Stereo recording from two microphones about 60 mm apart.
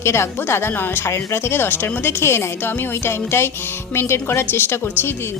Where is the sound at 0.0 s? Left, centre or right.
Left.